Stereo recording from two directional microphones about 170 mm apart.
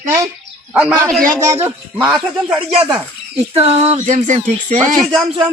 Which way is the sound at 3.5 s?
35° right (ahead or behind).